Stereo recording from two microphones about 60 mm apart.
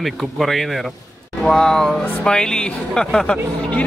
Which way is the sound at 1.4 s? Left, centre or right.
Centre.